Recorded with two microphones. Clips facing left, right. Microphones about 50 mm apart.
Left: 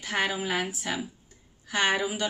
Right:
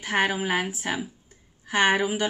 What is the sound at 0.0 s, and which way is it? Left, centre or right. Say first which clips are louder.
A woman's voice: right 4 dB; right.